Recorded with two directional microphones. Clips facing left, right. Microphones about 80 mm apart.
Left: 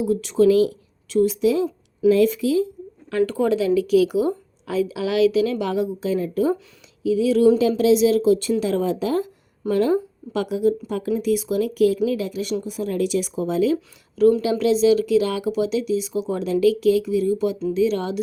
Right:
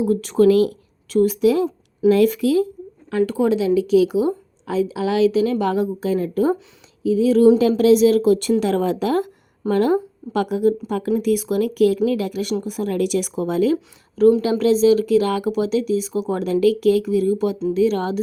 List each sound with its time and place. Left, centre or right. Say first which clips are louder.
0.0 s a woman's voice: right 2 dB; right
3.1 s a woman's voice: right 1 dB; centre; by 7.5 s right
7.8 s speech: right 3 dB; right
14.2 s a woman's voice: right 2 dB; right